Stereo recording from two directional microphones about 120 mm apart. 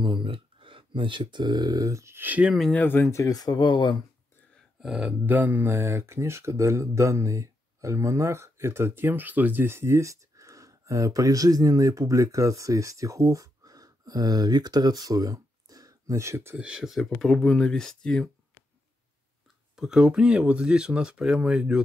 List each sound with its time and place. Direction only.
0.0 s speech: 45° right (ahead or behind); by 2.5 s 15° right (ahead or behind)
2.7 s speech: 15° left (ahead or behind); by 3.9 s 40° left (ahead or behind)
4.8 s speech: 10° right (ahead or behind)
16.5 s speech: 10° right (ahead or behind)
19.7 s speech: 5° right (ahead or behind)